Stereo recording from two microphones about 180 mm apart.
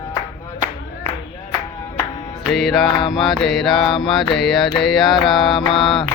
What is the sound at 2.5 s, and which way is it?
Mantra, centre (ahead or behind).